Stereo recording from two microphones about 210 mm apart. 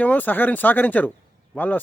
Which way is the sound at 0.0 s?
10° left (ahead or behind).